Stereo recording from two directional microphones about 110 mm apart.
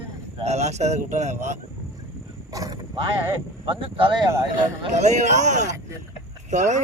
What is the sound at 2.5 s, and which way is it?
Speech, 30° right (ahead or behind).